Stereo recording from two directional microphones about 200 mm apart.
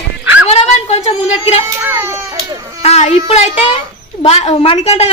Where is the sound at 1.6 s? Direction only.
10° right (ahead or behind).